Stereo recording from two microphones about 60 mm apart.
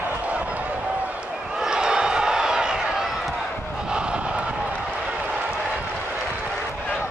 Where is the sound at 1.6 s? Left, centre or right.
Centre.